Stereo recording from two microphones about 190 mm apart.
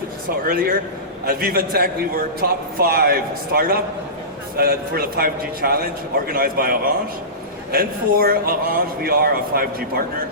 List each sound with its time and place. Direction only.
0.3 s a man's voice: 50° right (ahead or behind)